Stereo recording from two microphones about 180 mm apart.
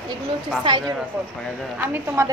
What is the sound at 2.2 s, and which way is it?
Speech, 15° right (ahead or behind).